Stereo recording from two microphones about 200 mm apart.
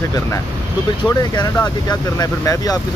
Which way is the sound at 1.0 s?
20° left (ahead or behind).